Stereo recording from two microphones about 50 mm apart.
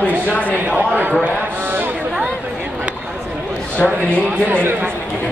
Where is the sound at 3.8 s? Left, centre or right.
Left.